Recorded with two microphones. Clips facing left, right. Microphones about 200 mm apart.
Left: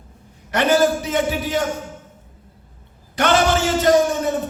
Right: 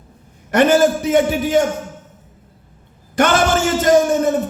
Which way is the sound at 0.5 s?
50° right (ahead or behind).